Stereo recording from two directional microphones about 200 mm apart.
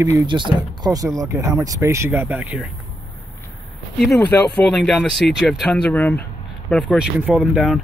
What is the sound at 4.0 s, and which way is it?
Speech, centre (ahead or behind).